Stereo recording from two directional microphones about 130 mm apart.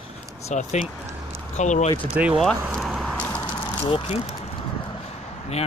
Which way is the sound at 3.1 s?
15° left (ahead or behind).